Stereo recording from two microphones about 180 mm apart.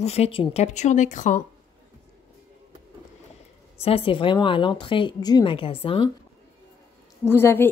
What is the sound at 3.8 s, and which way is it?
A woman's voice, 30° left (ahead or behind).